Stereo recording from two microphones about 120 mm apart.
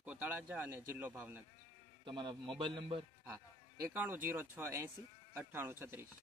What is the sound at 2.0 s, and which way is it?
A man's voice, 40° right (ahead or behind).